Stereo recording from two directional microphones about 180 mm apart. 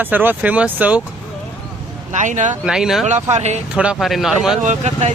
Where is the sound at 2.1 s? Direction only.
45° right (ahead or behind).